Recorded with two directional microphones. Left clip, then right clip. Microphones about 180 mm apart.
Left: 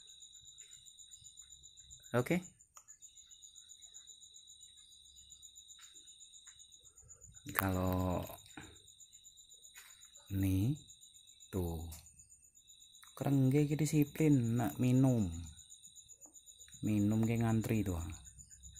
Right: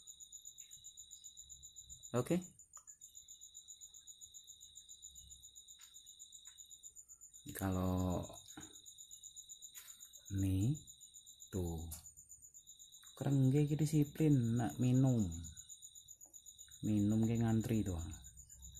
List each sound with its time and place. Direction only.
2.0 s speech: 15° left (ahead or behind)
7.4 s mantra: 10° left (ahead or behind)
10.4 s a sound: 10° left (ahead or behind)
13.1 s a sound: 10° left (ahead or behind)
14.5 s speech: 15° left (ahead or behind)
16.8 s speech: 15° left (ahead or behind)